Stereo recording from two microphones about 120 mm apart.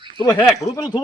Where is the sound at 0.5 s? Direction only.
30° left (ahead or behind).